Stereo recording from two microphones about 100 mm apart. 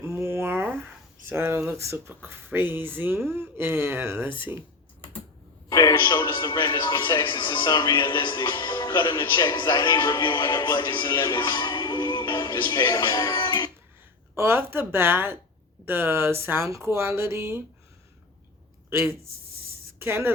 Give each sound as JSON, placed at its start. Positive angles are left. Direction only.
{"t": 0.0, "sound": "a sound", "side_deg": -25}
{"t": 1.3, "sound": "speech", "side_deg": -25}
{"t": 5.6, "sound": "a man's voice", "side_deg": 40}
{"t": 14.3, "sound": "speech", "side_deg": -25}
{"t": 18.9, "sound": "speech", "side_deg": -20}